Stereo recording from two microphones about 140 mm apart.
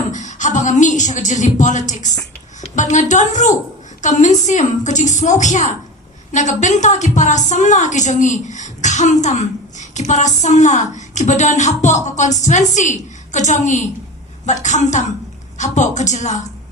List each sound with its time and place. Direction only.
0.1 s a woman's voice: 60° left (ahead or behind)